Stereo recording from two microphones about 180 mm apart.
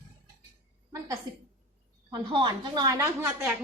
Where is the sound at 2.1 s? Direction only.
25° right (ahead or behind).